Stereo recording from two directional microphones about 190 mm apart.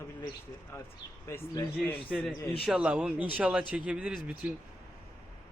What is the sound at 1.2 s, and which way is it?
Speech, 15° left (ahead or behind).